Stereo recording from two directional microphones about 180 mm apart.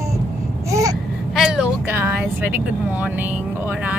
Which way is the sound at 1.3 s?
5° right (ahead or behind).